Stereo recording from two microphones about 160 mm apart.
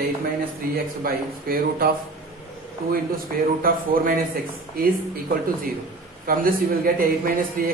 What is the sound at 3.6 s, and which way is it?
A man's voice, 65° right (ahead or behind).